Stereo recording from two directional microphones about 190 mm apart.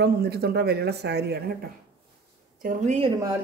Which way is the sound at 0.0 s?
55° right (ahead or behind).